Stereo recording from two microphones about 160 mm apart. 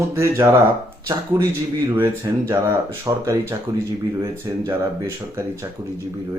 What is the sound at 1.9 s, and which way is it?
Speech, 15° right (ahead or behind).